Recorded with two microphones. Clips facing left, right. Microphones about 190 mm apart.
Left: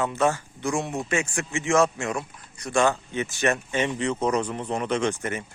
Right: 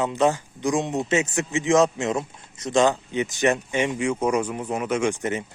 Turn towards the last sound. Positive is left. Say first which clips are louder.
# right 2 dB
turn(degrees=-20)  # may be behind; listen again after turning